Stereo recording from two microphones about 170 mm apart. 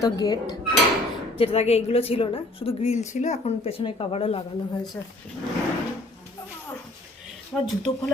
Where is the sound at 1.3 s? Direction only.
35° left (ahead or behind).